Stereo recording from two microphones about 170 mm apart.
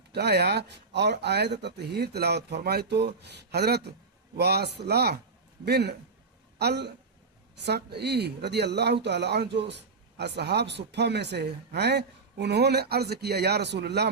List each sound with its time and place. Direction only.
0.1 s speech: 75° right (ahead or behind)